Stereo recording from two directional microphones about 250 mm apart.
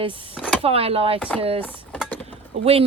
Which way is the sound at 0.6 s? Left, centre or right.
Right.